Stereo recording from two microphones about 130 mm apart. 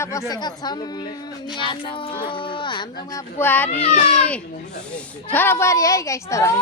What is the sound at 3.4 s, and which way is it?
Speech, 15° left (ahead or behind).